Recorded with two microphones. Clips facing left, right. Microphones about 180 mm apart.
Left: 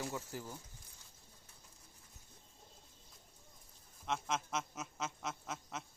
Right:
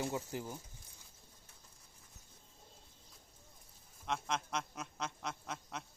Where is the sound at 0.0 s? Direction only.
20° right (ahead or behind).